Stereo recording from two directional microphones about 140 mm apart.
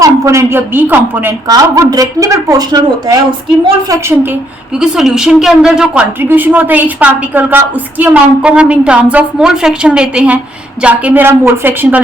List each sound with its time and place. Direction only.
0.0 s a woman's voice: 20° right (ahead or behind)
1.5 s a woman's voice: 25° right (ahead or behind)
4.8 s a woman's voice: 5° right (ahead or behind)